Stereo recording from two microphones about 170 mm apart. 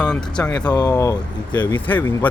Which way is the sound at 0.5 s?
25° left (ahead or behind).